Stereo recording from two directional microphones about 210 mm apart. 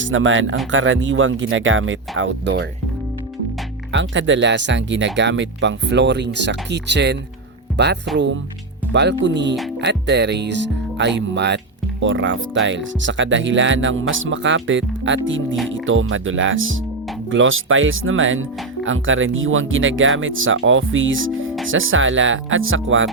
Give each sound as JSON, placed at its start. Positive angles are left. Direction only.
{"t": 0.0, "sound": "speech", "side_deg": -65}
{"t": 3.9, "sound": "speech", "side_deg": -60}